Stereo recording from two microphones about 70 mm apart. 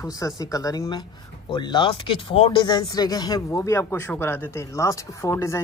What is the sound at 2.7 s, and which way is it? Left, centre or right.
Speech, left.